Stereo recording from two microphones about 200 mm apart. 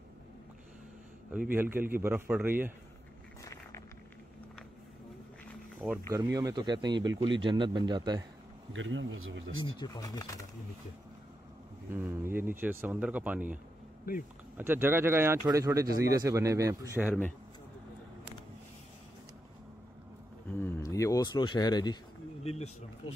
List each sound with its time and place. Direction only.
1.5 s speech: 10° right (ahead or behind)
5.8 s speech: centre (ahead or behind)
6.1 s speech: 15° right (ahead or behind)
8.7 s speech: 70° right (ahead or behind)
9.8 s speech: 20° left (ahead or behind)
11.9 s speech: 10° right (ahead or behind)
14.6 s speech: 10° right (ahead or behind)
20.5 s a sound: 15° left (ahead or behind)
22.4 s speech: 30° left (ahead or behind)